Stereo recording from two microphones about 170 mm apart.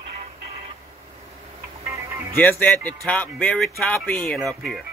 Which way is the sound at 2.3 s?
10° left (ahead or behind).